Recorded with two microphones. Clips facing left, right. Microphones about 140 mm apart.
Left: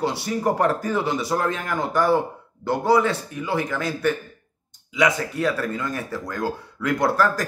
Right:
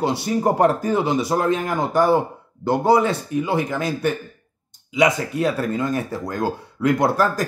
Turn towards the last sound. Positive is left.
turn(degrees=-20)  # may be behind; listen again after turning